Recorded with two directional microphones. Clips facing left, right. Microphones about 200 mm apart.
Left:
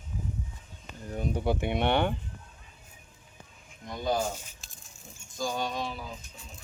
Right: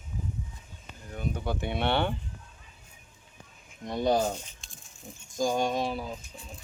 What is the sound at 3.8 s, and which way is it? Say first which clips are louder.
Speech: right 4 dB; 35° right (ahead or behind).